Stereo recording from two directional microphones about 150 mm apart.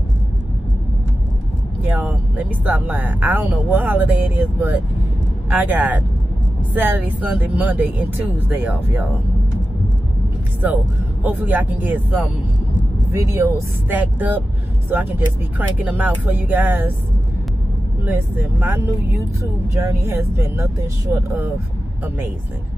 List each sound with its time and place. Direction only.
1.8 s speech: 10° right (ahead or behind)
11.2 s speech: 10° right (ahead or behind)
13.1 s speech: 20° right (ahead or behind)
18.0 s speech: 15° right (ahead or behind)